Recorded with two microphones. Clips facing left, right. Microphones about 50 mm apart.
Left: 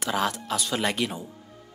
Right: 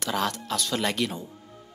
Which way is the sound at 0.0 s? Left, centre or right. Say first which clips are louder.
Left 1 dB; centre.